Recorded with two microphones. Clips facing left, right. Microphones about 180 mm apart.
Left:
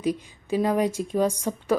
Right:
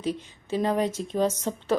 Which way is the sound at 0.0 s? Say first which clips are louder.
Left 3 dB; 10° left (ahead or behind).